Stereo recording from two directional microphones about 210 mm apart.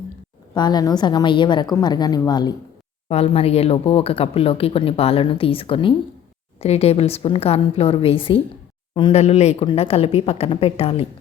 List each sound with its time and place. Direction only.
0.5 s speech: 20° left (ahead or behind)